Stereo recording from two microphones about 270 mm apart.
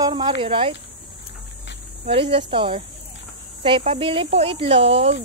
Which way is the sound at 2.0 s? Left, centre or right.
Right.